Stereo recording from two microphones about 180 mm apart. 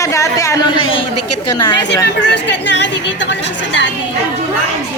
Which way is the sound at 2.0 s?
75° left (ahead or behind).